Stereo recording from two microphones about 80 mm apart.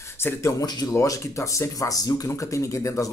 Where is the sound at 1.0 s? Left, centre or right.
Left.